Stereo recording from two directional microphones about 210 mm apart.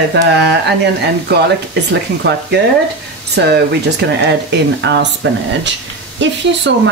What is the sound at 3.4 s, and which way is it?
Speech, 55° right (ahead or behind).